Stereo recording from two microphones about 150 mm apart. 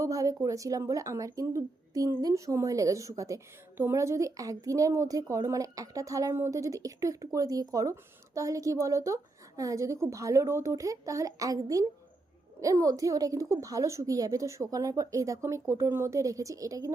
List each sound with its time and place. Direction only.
0.0 s a woman's voice: 25° right (ahead or behind)